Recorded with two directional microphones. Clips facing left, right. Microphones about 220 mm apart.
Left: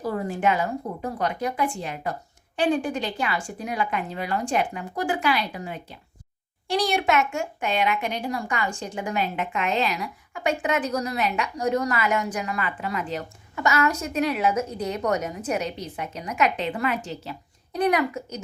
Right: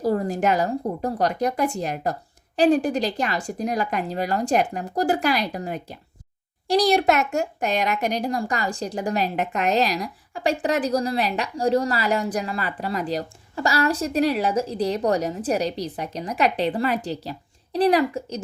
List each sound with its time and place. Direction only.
0.0 s speech: 40° right (ahead or behind)